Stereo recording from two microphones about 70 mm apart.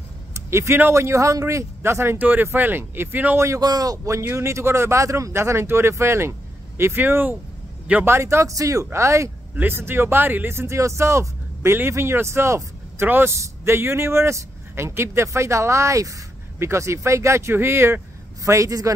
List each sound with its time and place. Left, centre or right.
0.3 s a man's voice: right
2.1 s speech: right
3.3 s speech: right
3.6 s a man's voice: right
4.1 s a man's voice: right
8.0 s speech: right
9.6 s a man's voice: right
13.0 s a man's voice: right
18.4 s a man's voice: right